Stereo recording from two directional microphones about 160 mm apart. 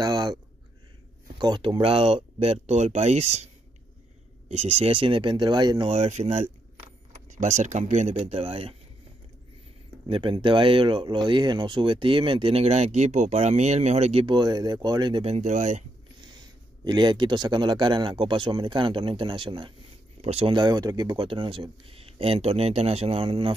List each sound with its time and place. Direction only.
0.0 s a sound: 25° right (ahead or behind)
1.4 s speech: 25° right (ahead or behind); by 3.4 s 45° right (ahead or behind)
4.5 s speech: 40° right (ahead or behind)
5.9 s speech: 45° right (ahead or behind)
10.0 s speech: 35° right (ahead or behind); by 15.8 s 50° right (ahead or behind)
16.8 s speech: 30° right (ahead or behind)